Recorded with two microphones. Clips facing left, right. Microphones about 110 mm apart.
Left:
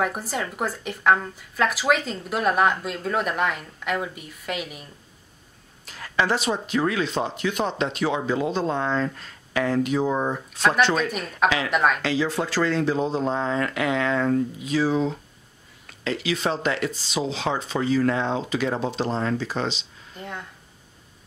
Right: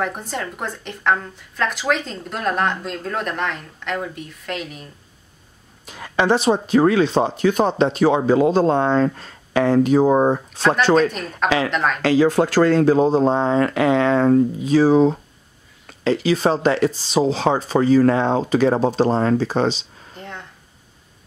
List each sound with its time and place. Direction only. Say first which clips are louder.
0.0 s a woman's voice: right 1 dB; 5° left (ahead or behind)
5.9 s speech: right 5 dB; 20° right (ahead or behind)
6.4 s speech: right 8 dB; 35° right (ahead or behind)
11.1 s a woman's voice: right 3 dB; 5° left (ahead or behind)
11.4 s speech: right 3 dB; 35° right (ahead or behind)
11.7 s a woman's voice: even; 5° left (ahead or behind)
12.0 s speech: right 9 dB; 45° right (ahead or behind)
20.2 s a sound: even; 5° left (ahead or behind)